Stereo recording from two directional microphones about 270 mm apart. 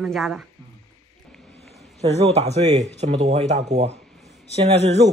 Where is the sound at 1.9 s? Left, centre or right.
Right.